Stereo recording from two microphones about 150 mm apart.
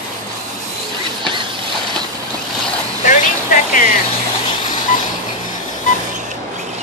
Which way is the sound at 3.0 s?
60° left (ahead or behind).